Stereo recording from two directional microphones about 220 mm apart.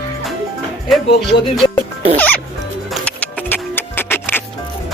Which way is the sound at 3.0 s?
5° left (ahead or behind).